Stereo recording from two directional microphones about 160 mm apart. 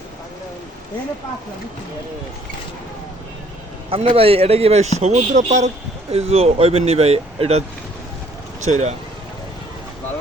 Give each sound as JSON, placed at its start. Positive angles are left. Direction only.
{"t": 3.8, "sound": "speech", "side_deg": -35}
{"t": 8.7, "sound": "speech", "side_deg": -45}